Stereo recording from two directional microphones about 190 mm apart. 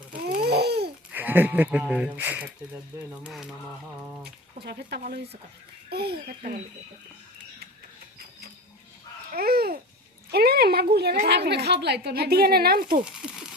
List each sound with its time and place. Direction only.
0.3 s babbling: 55° right (ahead or behind)
1.1 s speech: 10° right (ahead or behind)
4.6 s a woman's voice: 55° right (ahead or behind)
9.3 s babbling: 55° right (ahead or behind)
10.3 s a woman's voice: 55° right (ahead or behind)
13.2 s a sound: 5° right (ahead or behind)